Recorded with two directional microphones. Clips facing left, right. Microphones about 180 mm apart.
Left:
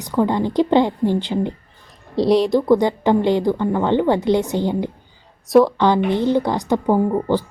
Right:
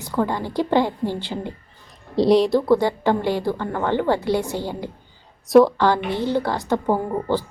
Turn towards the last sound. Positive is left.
turn(degrees=15)  # may be behind; listen again after turning